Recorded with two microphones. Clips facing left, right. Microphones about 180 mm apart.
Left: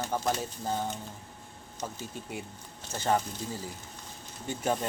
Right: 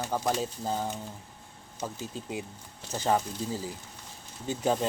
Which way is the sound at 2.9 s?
15° right (ahead or behind).